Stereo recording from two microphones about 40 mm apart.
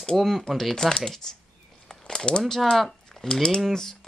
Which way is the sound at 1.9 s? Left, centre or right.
Centre.